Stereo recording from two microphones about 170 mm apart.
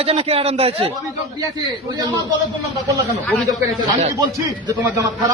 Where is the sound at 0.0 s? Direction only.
35° right (ahead or behind).